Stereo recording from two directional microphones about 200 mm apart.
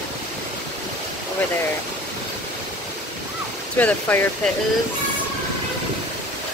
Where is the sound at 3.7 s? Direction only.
10° left (ahead or behind).